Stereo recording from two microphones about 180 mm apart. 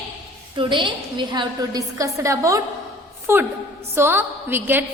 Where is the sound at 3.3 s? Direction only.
15° right (ahead or behind).